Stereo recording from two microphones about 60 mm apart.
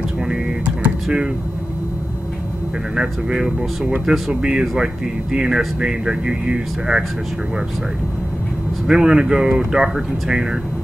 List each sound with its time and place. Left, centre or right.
0.2 s computer keyboard: centre
1.0 s speech: centre
3.0 s speech: centre
8.8 s speech: centre